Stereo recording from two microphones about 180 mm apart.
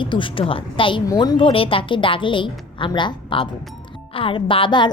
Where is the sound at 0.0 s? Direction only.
25° left (ahead or behind).